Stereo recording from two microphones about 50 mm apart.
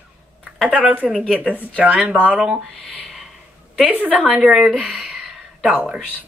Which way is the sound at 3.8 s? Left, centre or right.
Right.